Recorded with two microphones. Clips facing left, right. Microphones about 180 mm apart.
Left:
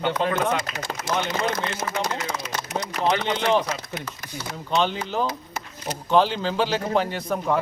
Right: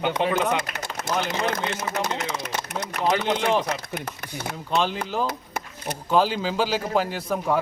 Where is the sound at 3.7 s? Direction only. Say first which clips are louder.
Right 1 dB; 60° right (ahead or behind).